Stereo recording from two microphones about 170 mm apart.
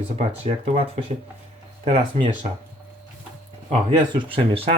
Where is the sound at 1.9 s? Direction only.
35° right (ahead or behind).